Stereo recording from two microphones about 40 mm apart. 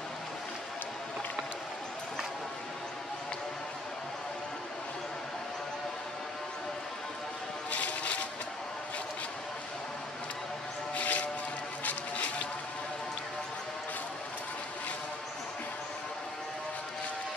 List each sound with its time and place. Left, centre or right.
7.7 s music: left
11.0 s music: left